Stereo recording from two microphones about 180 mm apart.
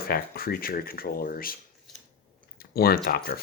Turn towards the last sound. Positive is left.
turn(degrees=60)  # may be behind; listen again after turning